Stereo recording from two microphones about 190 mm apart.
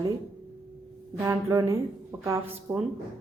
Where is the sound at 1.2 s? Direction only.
15° right (ahead or behind).